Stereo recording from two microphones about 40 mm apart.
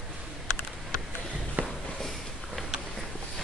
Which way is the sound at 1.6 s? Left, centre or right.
Right.